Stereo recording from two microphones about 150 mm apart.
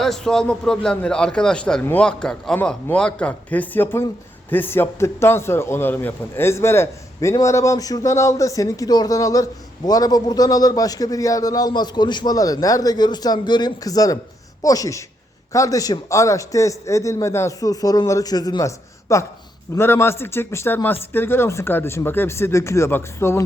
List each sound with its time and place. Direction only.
0.0 s a man's voice: centre (ahead or behind)